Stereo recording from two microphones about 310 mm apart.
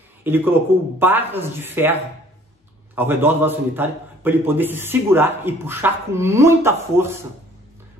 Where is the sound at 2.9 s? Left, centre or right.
Centre.